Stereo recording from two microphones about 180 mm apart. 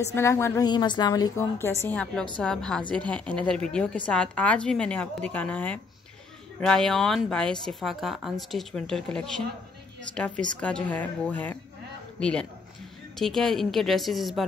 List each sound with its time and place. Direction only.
0.0 s a woman's voice: 15° left (ahead or behind)
1.8 s a woman's voice: 10° left (ahead or behind)